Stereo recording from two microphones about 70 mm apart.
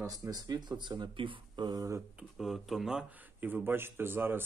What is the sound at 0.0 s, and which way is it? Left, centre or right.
Speech, right.